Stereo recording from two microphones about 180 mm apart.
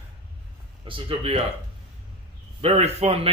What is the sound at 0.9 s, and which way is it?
Speech, 30° right (ahead or behind).